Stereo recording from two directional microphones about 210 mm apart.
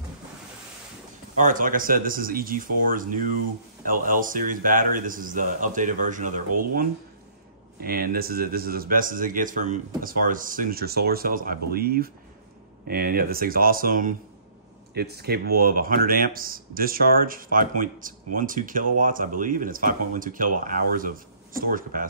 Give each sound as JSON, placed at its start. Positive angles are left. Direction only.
{"t": 1.4, "sound": "a man's voice", "side_deg": -40}